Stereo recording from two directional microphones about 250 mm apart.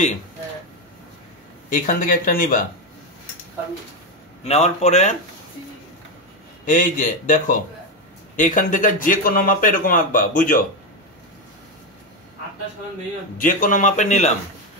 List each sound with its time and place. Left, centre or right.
1.7 s speech: left
4.5 s a man's voice: left
6.6 s speech: left
13.4 s speech: left